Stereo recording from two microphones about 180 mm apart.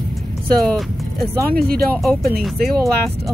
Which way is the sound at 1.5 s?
60° right (ahead or behind).